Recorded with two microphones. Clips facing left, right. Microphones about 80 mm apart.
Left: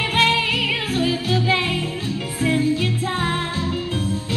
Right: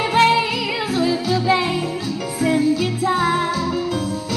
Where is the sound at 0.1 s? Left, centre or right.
Right.